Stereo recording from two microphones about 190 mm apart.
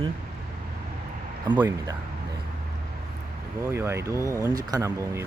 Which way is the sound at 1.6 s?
15° right (ahead or behind).